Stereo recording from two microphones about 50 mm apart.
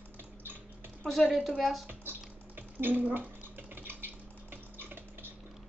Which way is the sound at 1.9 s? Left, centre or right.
Right.